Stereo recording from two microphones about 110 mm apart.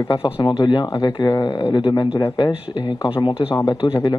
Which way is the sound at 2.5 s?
50° left (ahead or behind).